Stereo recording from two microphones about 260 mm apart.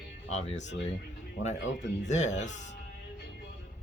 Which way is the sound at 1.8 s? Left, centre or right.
Left.